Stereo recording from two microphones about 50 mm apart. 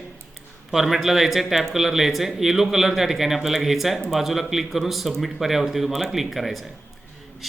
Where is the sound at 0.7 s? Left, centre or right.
Centre.